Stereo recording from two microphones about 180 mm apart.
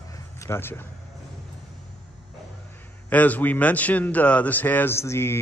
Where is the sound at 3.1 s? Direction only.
10° left (ahead or behind).